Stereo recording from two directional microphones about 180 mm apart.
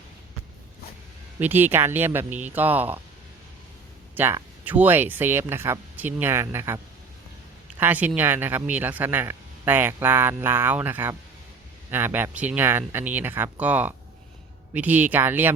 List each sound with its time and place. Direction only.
1.4 s speech: 10° right (ahead or behind)
4.1 s speech: 10° right (ahead or behind)
7.8 s speech: 10° right (ahead or behind)